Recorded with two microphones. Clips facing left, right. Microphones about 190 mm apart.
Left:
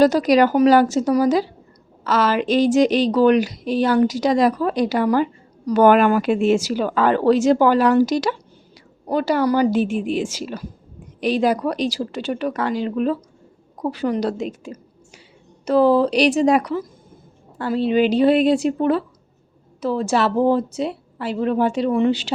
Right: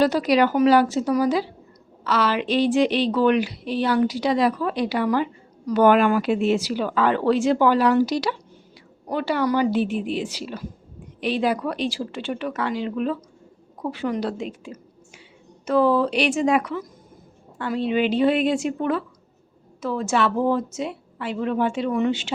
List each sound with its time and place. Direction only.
0.0 s a woman's voice: 40° left (ahead or behind)